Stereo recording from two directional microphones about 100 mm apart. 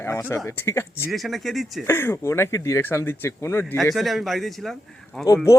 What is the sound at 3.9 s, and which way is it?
Speech, centre (ahead or behind).